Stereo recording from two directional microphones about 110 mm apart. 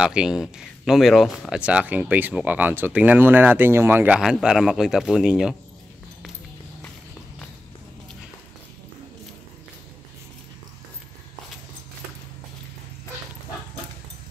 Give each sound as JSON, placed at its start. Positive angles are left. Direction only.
{"t": 0.0, "sound": "speech", "side_deg": -5}
{"t": 1.6, "sound": "speech", "side_deg": -10}
{"t": 4.2, "sound": "speech", "side_deg": -5}